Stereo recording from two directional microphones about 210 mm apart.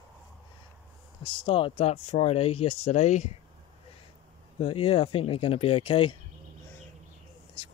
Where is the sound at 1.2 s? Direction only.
25° left (ahead or behind).